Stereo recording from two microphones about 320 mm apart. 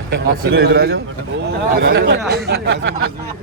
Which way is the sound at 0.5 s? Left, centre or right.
Right.